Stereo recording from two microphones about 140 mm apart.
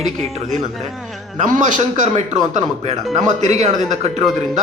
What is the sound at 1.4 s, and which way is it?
A man's voice, 65° right (ahead or behind).